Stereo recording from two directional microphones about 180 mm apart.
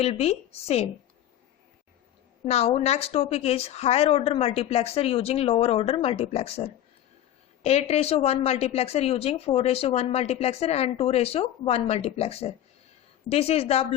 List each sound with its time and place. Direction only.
0.0 s speech: 35° left (ahead or behind)
2.5 s speech: 35° left (ahead or behind)